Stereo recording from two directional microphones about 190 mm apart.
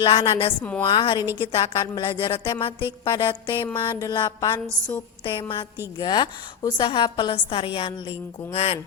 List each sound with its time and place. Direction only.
0.0 s a woman's voice: 25° left (ahead or behind)
0.6 s a woman's voice: 5° left (ahead or behind)
0.9 s a woman's voice: 25° left (ahead or behind)